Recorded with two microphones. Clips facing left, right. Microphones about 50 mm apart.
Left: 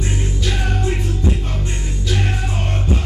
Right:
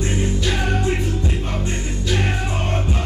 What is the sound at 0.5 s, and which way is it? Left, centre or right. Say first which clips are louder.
Music: even; right.